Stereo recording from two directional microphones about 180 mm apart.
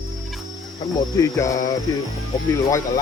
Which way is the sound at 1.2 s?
15° left (ahead or behind).